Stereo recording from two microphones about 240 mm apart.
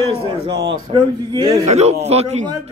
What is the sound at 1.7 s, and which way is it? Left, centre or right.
Speech, right.